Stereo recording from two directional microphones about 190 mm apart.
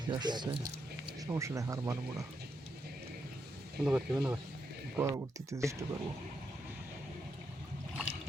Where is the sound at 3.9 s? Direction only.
5° right (ahead or behind).